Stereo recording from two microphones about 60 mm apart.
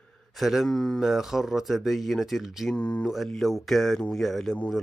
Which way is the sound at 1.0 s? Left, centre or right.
Centre.